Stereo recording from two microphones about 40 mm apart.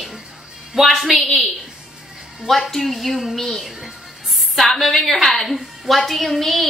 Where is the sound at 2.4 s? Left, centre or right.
Centre.